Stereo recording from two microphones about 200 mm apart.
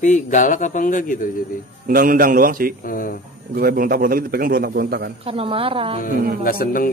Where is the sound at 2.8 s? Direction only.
45° left (ahead or behind).